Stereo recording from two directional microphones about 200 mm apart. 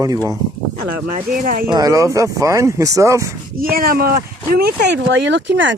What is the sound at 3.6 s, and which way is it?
Speech, 45° right (ahead or behind).